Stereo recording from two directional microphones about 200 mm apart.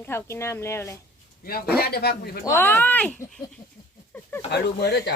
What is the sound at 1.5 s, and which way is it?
Speech, 50° left (ahead or behind).